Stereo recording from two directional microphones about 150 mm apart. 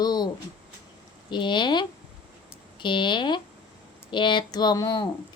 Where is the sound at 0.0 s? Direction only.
25° left (ahead or behind).